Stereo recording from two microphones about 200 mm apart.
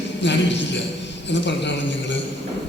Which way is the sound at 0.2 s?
65° left (ahead or behind).